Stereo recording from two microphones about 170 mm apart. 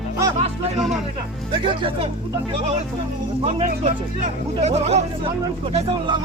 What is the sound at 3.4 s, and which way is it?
Speech, 35° right (ahead or behind).